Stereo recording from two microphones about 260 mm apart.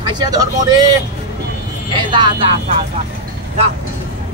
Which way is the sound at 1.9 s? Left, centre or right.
Centre.